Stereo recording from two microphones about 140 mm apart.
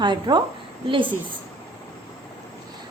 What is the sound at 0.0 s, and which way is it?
Speech, 30° right (ahead or behind).